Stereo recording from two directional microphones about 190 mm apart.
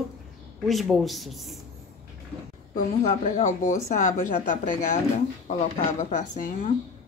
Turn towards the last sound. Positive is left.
turn(degrees=40)  # may be behind; listen again after turning